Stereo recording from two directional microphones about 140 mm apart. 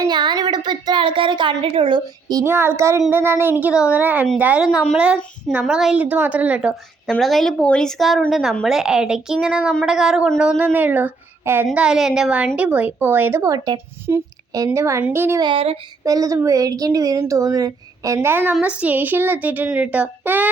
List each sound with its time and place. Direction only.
0.0 s a woman's voice: 30° right (ahead or behind); by 6.7 s 10° right (ahead or behind)
7.1 s a woman's voice: centre (ahead or behind); by 15.4 s 15° right (ahead or behind)
15.4 s speech: 40° right (ahead or behind)
16.0 s a woman's voice: 25° right (ahead or behind)